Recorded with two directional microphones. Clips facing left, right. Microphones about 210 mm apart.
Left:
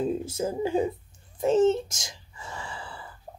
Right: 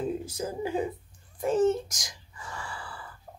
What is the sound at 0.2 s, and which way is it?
Speech, 25° left (ahead or behind).